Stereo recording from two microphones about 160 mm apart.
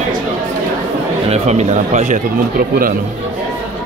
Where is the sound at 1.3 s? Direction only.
45° right (ahead or behind).